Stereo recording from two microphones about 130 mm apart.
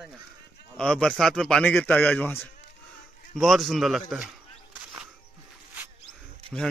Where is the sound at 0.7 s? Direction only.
5° left (ahead or behind).